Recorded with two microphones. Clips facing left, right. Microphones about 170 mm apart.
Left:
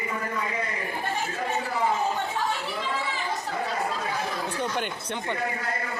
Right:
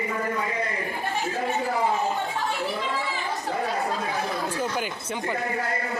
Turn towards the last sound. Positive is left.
turn(degrees=-5)  # may be behind; listen again after turning